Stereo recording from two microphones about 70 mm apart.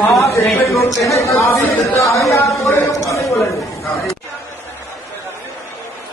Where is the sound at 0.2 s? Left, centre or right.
Left.